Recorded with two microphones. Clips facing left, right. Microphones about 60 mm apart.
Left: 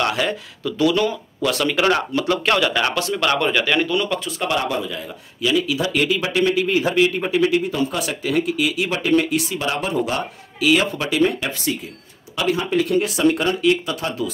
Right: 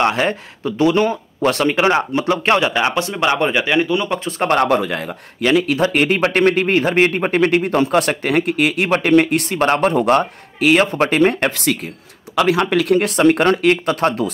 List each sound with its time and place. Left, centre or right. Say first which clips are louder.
0.0 s speech: right 4 dB; right
4.3 s a man's voice: right 7 dB; right